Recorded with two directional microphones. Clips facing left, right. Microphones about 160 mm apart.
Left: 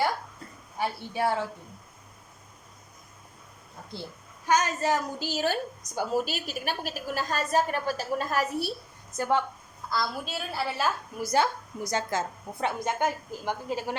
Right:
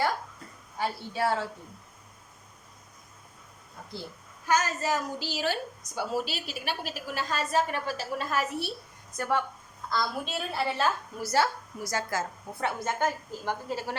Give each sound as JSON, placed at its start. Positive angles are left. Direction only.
{"t": 0.8, "sound": "a woman's voice", "side_deg": 15}
{"t": 4.4, "sound": "speech", "side_deg": 20}
{"t": 5.3, "sound": "a woman's voice", "side_deg": 45}
{"t": 9.1, "sound": "speech", "side_deg": 25}
{"t": 9.9, "sound": "a woman's voice", "side_deg": 0}